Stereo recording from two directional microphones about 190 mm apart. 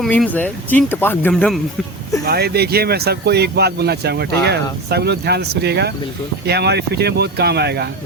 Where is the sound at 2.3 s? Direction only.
55° right (ahead or behind).